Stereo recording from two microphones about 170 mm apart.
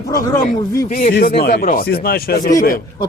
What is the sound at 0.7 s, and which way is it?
Speech, 55° left (ahead or behind).